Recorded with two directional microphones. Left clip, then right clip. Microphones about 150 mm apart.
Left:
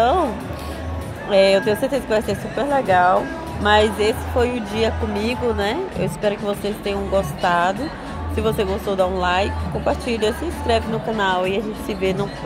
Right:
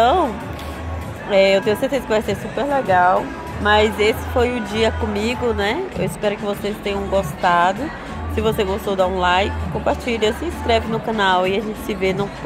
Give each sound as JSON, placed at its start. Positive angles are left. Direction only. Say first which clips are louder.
{"t": 0.0, "sound": "music", "louder": "right 2 dB", "side_deg": -20}
{"t": 1.3, "sound": "speech", "louder": "even", "side_deg": -10}
{"t": 11.1, "sound": "speech", "louder": "right 3 dB", "side_deg": -25}